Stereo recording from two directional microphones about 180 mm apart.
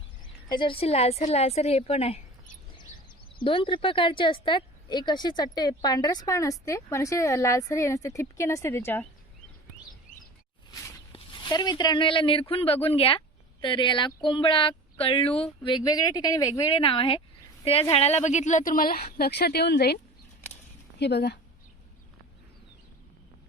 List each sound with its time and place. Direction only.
0.4 s a woman's voice: 25° left (ahead or behind)
11.1 s speech: 25° left (ahead or behind)
16.7 s a woman's voice: 30° left (ahead or behind); by 20.0 s 65° left (ahead or behind)
21.0 s speech: 65° left (ahead or behind)